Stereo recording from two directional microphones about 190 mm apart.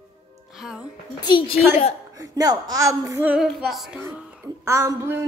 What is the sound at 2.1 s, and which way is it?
A woman's voice, 20° right (ahead or behind).